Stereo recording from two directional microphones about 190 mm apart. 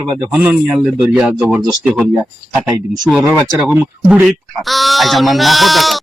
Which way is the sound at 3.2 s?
15° right (ahead or behind).